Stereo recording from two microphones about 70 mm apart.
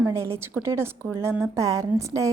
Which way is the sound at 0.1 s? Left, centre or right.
Right.